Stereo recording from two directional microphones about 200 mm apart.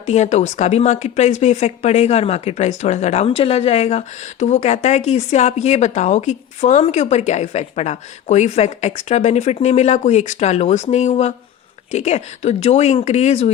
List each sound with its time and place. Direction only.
0.0 s speech: 35° left (ahead or behind)